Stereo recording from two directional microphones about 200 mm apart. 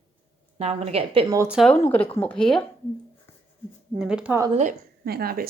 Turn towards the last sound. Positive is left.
turn(degrees=-50)  # may be behind; listen again after turning